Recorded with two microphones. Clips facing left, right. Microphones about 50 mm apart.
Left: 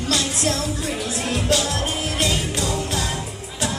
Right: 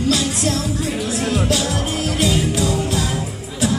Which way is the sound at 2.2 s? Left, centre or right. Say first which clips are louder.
Right 5 dB; centre.